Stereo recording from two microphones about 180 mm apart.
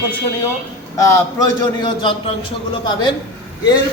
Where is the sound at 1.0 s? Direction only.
20° left (ahead or behind).